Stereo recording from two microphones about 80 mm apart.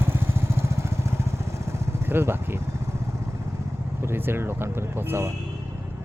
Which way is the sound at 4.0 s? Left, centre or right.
Right.